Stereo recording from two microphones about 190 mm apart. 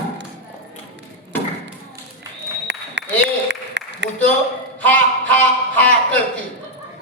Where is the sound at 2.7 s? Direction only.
65° right (ahead or behind).